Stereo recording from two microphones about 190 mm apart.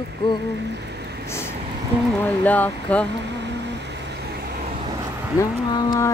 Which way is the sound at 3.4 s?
65° right (ahead or behind).